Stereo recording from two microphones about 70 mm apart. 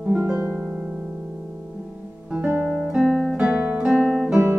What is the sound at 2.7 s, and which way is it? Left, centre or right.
Music, centre.